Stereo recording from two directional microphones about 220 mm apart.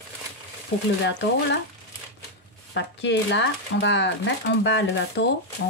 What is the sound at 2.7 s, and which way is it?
Speech, 55° left (ahead or behind).